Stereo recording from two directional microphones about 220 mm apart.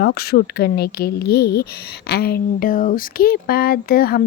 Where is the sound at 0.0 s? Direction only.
45° left (ahead or behind).